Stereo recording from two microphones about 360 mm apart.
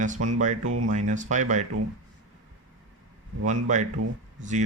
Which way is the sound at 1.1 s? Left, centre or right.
Centre.